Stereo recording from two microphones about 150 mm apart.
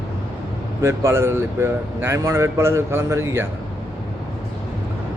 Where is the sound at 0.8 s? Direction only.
20° right (ahead or behind).